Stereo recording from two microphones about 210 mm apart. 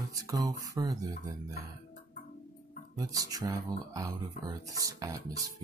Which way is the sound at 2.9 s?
15° right (ahead or behind).